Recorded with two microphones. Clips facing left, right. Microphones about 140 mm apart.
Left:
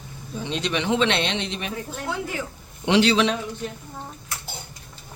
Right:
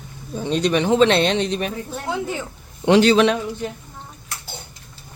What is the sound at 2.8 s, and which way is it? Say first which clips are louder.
Speech: right 5 dB; 45° right (ahead or behind).